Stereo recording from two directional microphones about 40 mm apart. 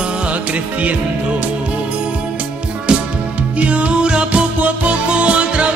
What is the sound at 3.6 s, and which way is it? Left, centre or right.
Music, right.